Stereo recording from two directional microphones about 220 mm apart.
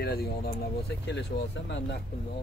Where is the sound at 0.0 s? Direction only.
45° left (ahead or behind).